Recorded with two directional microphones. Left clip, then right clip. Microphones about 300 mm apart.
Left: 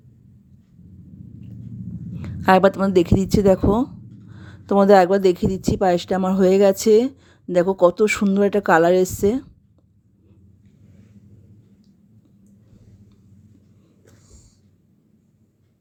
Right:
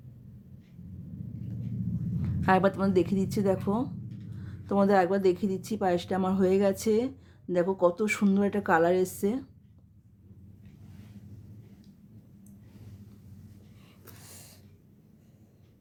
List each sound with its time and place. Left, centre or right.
2.4 s a woman's voice: left